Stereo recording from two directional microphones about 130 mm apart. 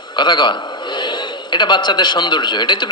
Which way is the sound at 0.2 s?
35° left (ahead or behind).